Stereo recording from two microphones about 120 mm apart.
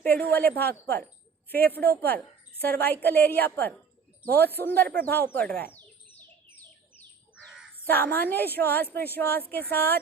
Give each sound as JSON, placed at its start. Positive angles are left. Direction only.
{"t": 0.0, "sound": "a woman's voice", "side_deg": 15}
{"t": 7.9, "sound": "a woman's voice", "side_deg": 15}